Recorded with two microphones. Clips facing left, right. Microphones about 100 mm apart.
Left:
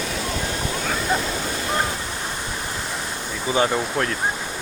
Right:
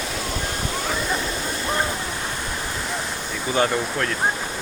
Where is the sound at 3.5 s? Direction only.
20° left (ahead or behind).